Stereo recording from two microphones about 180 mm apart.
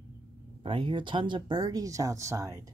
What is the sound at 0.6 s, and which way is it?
Speech, 30° right (ahead or behind).